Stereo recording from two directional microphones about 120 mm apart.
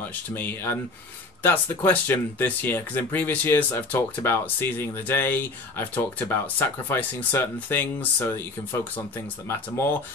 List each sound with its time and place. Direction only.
0.0 s speech: 15° left (ahead or behind)